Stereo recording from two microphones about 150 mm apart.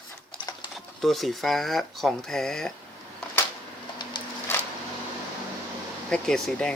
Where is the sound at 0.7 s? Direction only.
Centre (ahead or behind).